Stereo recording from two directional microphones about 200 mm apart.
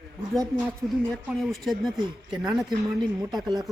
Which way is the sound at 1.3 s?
Centre (ahead or behind).